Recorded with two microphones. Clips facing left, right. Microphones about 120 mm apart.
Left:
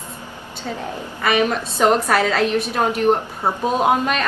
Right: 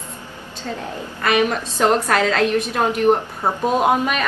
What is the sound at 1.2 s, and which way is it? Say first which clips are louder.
A woman's voice: even; centre (ahead or behind).